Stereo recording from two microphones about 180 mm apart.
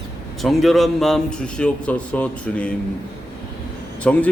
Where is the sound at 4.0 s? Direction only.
10° left (ahead or behind).